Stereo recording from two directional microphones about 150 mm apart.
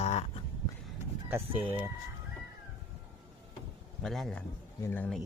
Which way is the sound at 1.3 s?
15° right (ahead or behind).